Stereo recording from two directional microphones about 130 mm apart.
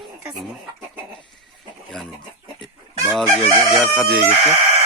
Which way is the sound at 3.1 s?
5° left (ahead or behind).